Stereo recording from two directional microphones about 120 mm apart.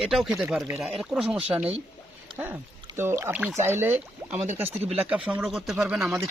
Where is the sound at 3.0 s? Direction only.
20° right (ahead or behind).